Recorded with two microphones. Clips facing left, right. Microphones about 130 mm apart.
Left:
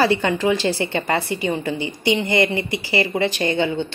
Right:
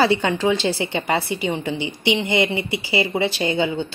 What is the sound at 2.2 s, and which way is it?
A woman's voice, 20° right (ahead or behind).